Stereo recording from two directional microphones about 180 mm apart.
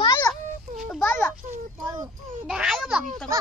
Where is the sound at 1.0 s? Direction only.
10° left (ahead or behind).